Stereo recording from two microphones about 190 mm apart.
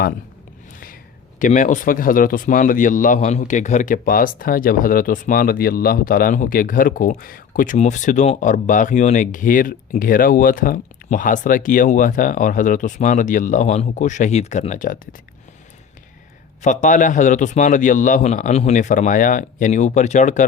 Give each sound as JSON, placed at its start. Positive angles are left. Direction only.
{"t": 1.4, "sound": "speech", "side_deg": 40}
{"t": 16.6, "sound": "a man's voice", "side_deg": 40}